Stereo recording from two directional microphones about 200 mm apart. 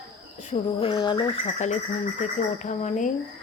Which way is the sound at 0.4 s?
25° left (ahead or behind).